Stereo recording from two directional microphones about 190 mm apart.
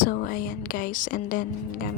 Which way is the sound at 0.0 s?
50° left (ahead or behind).